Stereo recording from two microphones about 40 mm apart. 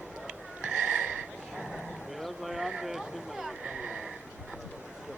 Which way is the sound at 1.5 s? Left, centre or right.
Centre.